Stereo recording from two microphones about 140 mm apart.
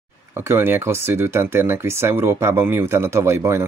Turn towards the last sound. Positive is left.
turn(degrees=-20)  # may be behind; listen again after turning